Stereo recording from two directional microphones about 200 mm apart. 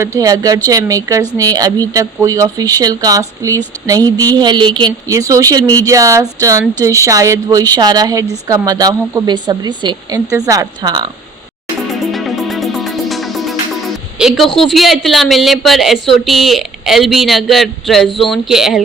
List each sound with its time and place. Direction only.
0.2 s a woman's voice: 20° right (ahead or behind)
12.1 s music: centre (ahead or behind)
14.2 s a woman's voice: centre (ahead or behind)